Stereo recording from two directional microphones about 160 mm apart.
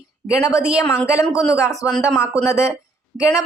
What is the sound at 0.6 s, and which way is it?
Speech, 5° right (ahead or behind).